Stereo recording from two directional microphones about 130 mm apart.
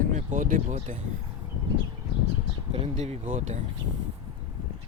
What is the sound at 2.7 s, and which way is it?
Speech, 50° right (ahead or behind).